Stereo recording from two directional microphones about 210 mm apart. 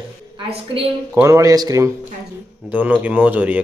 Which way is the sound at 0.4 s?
25° right (ahead or behind).